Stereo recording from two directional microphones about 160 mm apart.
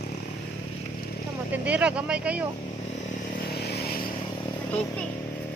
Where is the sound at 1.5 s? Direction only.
10° right (ahead or behind).